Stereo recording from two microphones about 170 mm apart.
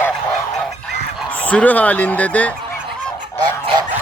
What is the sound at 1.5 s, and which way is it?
A man's voice, 10° left (ahead or behind).